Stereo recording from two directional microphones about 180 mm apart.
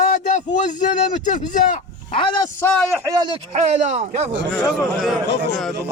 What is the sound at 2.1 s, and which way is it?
Speech, 25° left (ahead or behind).